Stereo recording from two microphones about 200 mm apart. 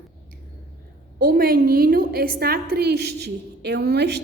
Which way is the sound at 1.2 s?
45° right (ahead or behind).